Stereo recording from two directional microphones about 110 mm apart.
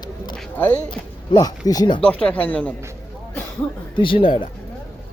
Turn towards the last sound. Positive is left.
turn(degrees=50)  # may be behind; listen again after turning